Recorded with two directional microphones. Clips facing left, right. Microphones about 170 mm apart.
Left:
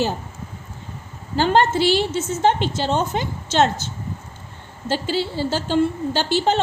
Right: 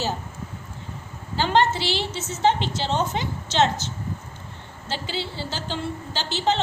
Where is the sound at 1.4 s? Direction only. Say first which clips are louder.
Left 4 dB; 50° left (ahead or behind).